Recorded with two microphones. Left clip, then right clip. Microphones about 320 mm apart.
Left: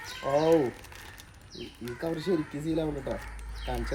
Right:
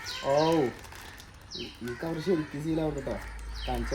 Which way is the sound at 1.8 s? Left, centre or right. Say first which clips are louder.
Even; centre.